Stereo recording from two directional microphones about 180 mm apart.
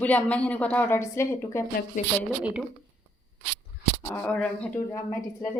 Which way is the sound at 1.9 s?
45° left (ahead or behind).